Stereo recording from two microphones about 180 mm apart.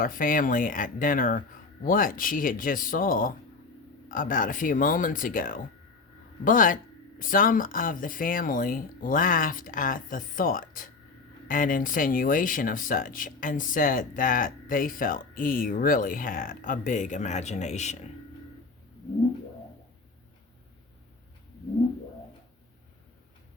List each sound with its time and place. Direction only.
0.0 s speech: 50° left (ahead or behind)